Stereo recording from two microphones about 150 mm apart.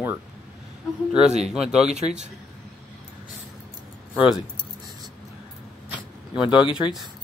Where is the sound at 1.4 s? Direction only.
5° right (ahead or behind).